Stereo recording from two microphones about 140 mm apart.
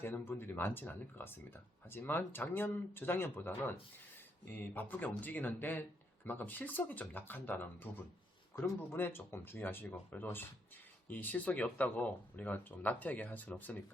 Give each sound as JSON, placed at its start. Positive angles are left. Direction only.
{"t": 0.0, "sound": "speech", "side_deg": 15}
{"t": 4.5, "sound": "speech", "side_deg": 15}